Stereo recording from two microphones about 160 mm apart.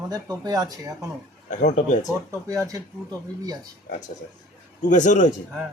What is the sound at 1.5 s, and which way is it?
Speech, 50° left (ahead or behind).